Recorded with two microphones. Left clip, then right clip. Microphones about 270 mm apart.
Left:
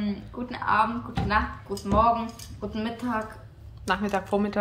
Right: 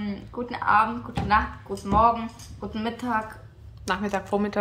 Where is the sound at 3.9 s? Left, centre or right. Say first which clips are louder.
Even; centre.